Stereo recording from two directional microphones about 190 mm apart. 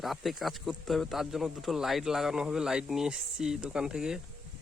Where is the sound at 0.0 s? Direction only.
Centre (ahead or behind).